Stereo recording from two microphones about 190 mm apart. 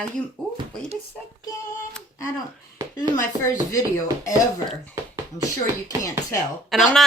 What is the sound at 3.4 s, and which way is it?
Speech, 15° left (ahead or behind).